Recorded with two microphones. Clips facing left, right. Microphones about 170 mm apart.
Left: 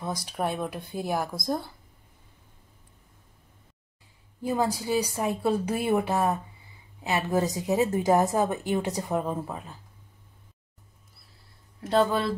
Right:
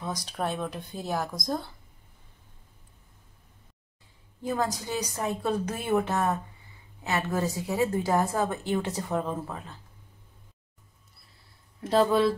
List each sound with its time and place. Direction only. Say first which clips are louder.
0.0 s speech: left 2 dB; 10° left (ahead or behind)
4.4 s a woman's voice: left 2 dB; 10° left (ahead or behind)
11.8 s speech: right 2 dB; centre (ahead or behind)